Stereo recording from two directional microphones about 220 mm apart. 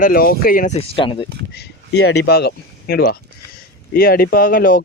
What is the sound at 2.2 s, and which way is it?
Speech, 45° left (ahead or behind).